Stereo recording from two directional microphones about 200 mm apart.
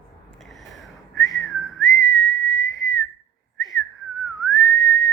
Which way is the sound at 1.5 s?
80° left.